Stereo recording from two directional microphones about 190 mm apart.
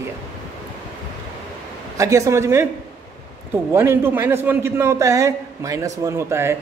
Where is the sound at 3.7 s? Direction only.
15° right (ahead or behind).